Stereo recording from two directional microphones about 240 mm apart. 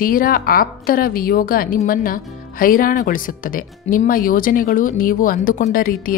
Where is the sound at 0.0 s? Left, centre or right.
Left.